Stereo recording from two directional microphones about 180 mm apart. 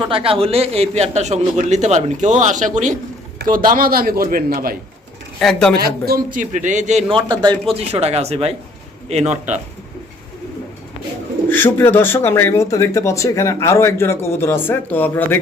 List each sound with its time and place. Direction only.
0.1 s a man's voice: 30° right (ahead or behind); by 4.8 s 55° right (ahead or behind)
5.4 s speech: 5° left (ahead or behind)
5.7 s a man's voice: 60° right (ahead or behind); by 7.2 s 40° right (ahead or behind)
7.3 s a man's voice: 25° right (ahead or behind)
11.4 s speech: 10° left (ahead or behind)